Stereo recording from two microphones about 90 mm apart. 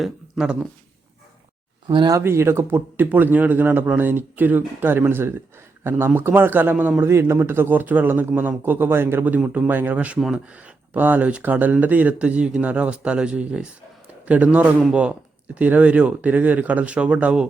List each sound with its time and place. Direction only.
0.0 s speech: 10° right (ahead or behind)
2.2 s speech: 30° right (ahead or behind)
7.0 s speech: 30° right (ahead or behind); by 10.2 s 15° right (ahead or behind)
10.2 s speech: centre (ahead or behind)
10.4 s speech: 15° right (ahead or behind)